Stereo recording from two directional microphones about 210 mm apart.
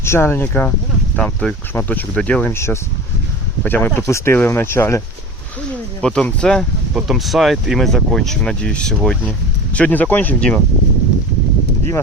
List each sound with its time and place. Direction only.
0.0 s speech: 10° left (ahead or behind)